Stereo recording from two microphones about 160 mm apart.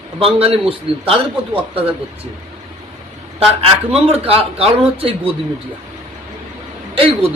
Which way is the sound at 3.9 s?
40° right (ahead or behind).